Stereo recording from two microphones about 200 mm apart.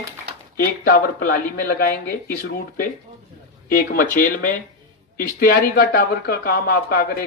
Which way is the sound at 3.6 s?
45° left (ahead or behind).